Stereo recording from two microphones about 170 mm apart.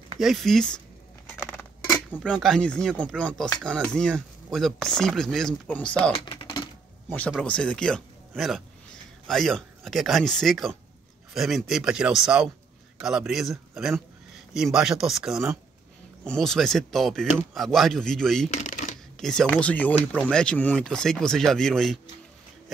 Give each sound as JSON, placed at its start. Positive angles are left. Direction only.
{"t": 0.2, "sound": "speech", "side_deg": 0}
{"t": 1.3, "sound": "scissors", "side_deg": 10}
{"t": 2.1, "sound": "speech", "side_deg": 0}
{"t": 6.1, "sound": "typing", "side_deg": 30}
{"t": 7.1, "sound": "speech", "side_deg": 0}
{"t": 18.5, "sound": "shuffling cards", "side_deg": 45}
{"t": 19.1, "sound": "speech", "side_deg": 5}